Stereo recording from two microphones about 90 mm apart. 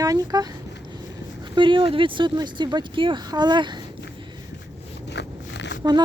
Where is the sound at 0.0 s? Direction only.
40° right (ahead or behind).